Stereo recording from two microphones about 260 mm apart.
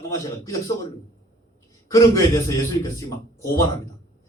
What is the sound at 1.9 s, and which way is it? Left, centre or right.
A man's voice, centre.